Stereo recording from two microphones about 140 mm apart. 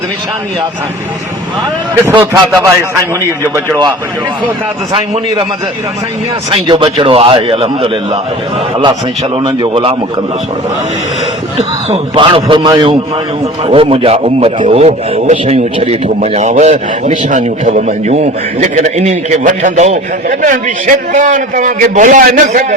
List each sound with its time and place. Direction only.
2.0 s a man's voice: 20° right (ahead or behind)
4.9 s a man's voice: 45° right (ahead or behind)
6.5 s a man's voice: 35° right (ahead or behind)
11.5 s a man's voice: 40° right (ahead or behind); by 18.1 s 65° right (ahead or behind)
18.1 s a man's voice: 55° right (ahead or behind)
20.2 s a man's voice: 65° right (ahead or behind)